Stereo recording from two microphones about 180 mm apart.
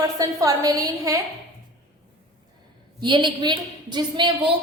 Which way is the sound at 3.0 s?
25° right (ahead or behind).